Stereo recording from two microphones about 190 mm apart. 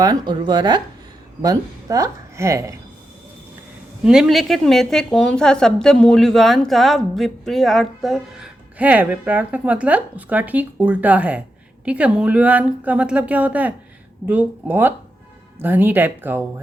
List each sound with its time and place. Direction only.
0.0 s speech: 20° right (ahead or behind)
4.0 s speech: 5° right (ahead or behind)